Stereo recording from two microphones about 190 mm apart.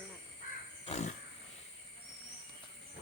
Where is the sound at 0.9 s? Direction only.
35° left (ahead or behind).